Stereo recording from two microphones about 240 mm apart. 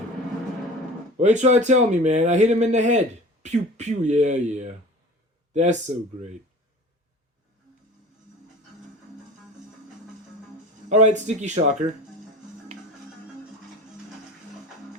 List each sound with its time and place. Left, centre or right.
1.1 s speech: right
10.8 s speech: right